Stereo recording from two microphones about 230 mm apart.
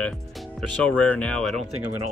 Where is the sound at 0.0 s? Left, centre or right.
Centre.